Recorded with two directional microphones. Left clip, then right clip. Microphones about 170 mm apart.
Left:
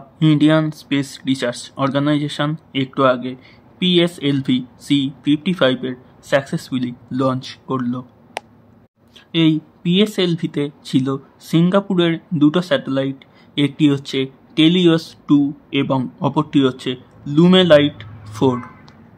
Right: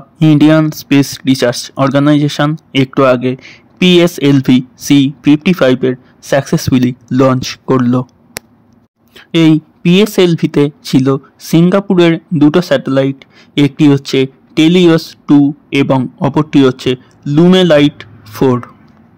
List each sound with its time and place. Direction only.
0.2 s speech: 40° right (ahead or behind)
9.1 s speech: 40° right (ahead or behind)